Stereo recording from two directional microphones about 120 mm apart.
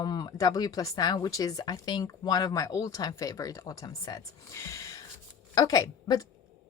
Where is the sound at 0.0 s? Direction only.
35° left (ahead or behind).